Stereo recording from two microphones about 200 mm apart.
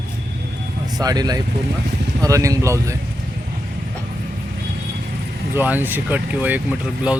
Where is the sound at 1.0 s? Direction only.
20° right (ahead or behind).